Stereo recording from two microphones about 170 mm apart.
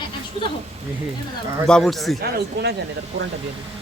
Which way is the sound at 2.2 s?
70° right (ahead or behind).